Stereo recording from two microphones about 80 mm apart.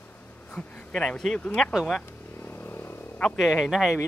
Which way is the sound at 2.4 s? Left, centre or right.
Left.